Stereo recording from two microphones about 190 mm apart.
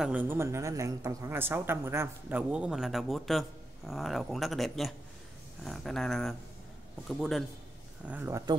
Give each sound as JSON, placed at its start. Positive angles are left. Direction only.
{"t": 0.0, "sound": "a woman's voice", "side_deg": -10}